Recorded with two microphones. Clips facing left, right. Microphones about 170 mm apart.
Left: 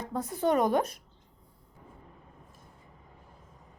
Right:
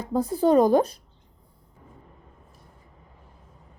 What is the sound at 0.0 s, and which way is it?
Speech, 30° right (ahead or behind).